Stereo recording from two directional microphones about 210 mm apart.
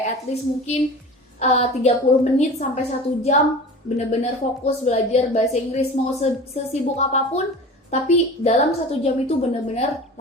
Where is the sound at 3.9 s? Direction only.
30° left (ahead or behind).